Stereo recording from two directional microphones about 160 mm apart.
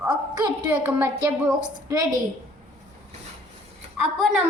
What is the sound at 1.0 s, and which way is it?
A child's voice, 15° right (ahead or behind).